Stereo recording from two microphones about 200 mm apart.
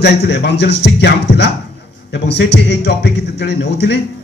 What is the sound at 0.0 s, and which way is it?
A man's voice, 55° left (ahead or behind).